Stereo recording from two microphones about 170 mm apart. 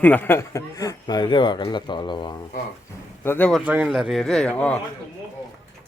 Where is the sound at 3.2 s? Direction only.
10° left (ahead or behind).